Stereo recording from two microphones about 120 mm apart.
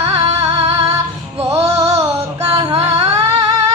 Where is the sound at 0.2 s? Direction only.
65° right (ahead or behind).